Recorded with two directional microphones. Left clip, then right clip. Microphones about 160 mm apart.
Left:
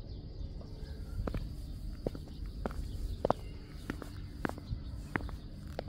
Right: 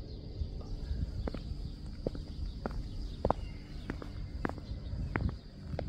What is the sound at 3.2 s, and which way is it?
Walk, 55° left (ahead or behind).